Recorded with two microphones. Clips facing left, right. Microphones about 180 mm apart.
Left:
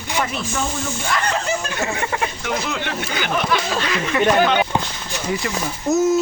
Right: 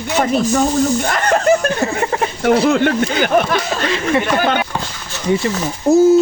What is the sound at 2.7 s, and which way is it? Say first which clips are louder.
Speech: right 11 dB; 50° right (ahead or behind).